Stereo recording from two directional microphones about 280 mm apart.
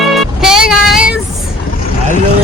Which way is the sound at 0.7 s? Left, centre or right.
Centre.